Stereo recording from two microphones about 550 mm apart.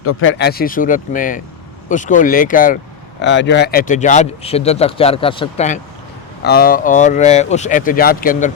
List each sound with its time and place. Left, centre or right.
0.0 s speech: left